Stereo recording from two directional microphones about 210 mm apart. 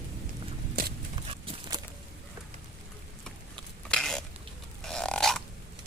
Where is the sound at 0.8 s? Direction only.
45° right (ahead or behind).